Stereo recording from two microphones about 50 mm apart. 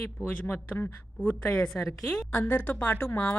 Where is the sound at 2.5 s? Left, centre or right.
Left.